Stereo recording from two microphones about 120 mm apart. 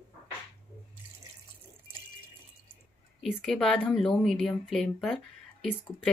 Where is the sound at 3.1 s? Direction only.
Centre (ahead or behind).